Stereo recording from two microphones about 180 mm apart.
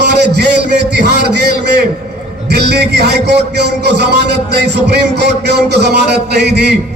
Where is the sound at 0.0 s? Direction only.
70° right (ahead or behind).